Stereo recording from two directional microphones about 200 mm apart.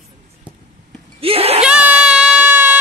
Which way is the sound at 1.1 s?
30° right (ahead or behind).